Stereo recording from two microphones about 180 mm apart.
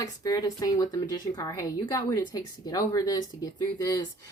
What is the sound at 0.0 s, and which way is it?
Speech, 20° left (ahead or behind).